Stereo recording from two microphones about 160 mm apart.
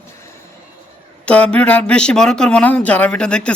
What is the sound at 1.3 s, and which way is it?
Speech, 10° left (ahead or behind).